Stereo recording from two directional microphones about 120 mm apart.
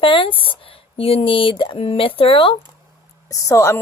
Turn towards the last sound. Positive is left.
turn(degrees=25)  # may be behind; listen again after turning